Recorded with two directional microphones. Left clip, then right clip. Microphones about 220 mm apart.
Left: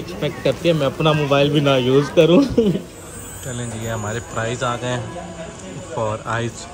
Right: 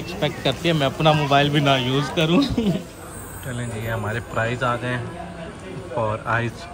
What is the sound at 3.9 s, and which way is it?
Speech, 5° left (ahead or behind).